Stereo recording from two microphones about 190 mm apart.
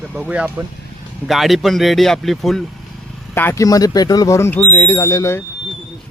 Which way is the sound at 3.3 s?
10° left (ahead or behind).